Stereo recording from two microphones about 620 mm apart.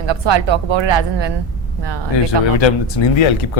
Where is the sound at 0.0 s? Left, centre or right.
Right.